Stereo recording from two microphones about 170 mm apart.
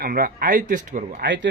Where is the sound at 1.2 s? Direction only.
90° right.